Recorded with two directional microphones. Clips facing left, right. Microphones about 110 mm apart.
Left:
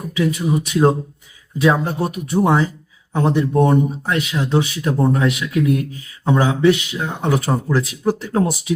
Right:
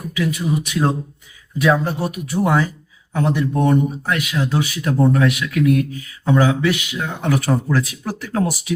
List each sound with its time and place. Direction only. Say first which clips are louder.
0.2 s speech: left 2 dB; 25° left (ahead or behind)